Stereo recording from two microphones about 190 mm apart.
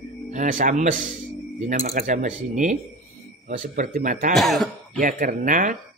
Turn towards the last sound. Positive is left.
turn(degrees=-40)  # may be behind; listen again after turning